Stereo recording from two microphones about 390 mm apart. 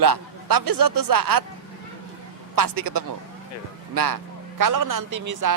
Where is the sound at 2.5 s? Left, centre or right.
Right.